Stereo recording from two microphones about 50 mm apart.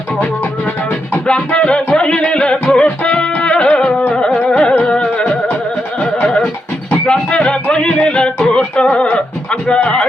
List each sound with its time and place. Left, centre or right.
1.5 s music: left
4.4 s carnatic music: centre
4.8 s music: centre